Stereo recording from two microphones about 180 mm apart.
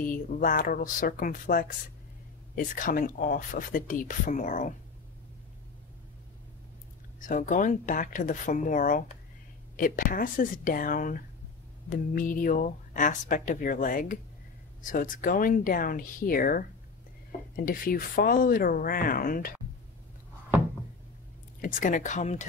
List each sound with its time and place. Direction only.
0.0 s speech: 50° left (ahead or behind)
7.2 s speech: 45° left (ahead or behind)
21.5 s speech: 45° left (ahead or behind)